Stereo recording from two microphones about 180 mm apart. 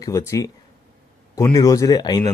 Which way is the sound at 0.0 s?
15° left (ahead or behind).